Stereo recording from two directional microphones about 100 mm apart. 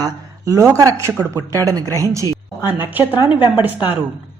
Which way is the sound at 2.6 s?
20° right (ahead or behind).